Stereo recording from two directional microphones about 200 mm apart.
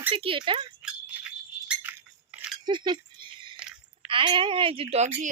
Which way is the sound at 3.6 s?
5° right (ahead or behind).